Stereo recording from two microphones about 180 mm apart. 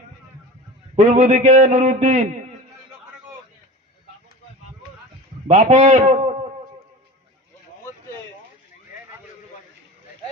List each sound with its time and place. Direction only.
0.9 s a man's voice: 40° right (ahead or behind)
5.5 s a man's voice: 40° right (ahead or behind)